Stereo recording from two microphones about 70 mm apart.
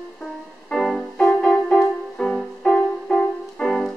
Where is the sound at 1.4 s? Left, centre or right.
Centre.